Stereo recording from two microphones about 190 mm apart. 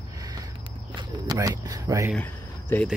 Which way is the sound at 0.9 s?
20° right (ahead or behind).